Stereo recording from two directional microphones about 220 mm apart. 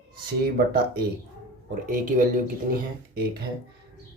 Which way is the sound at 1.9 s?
35° right (ahead or behind).